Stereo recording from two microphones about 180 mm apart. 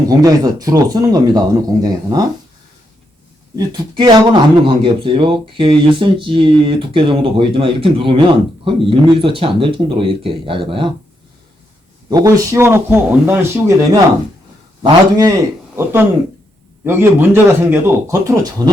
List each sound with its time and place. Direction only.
0.1 s speech: 20° right (ahead or behind)
3.5 s speech: 25° right (ahead or behind)
12.0 s a man's voice: 20° right (ahead or behind)